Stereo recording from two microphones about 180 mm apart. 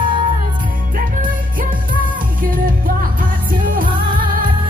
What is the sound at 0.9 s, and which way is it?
Music, 50° right (ahead or behind).